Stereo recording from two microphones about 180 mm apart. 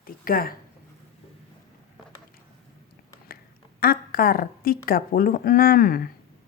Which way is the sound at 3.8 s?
55° left (ahead or behind).